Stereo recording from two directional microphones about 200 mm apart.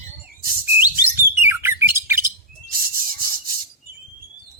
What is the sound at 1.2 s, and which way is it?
Bird, 10° right (ahead or behind).